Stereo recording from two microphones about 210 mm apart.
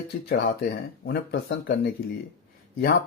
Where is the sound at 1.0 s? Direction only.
50° left (ahead or behind).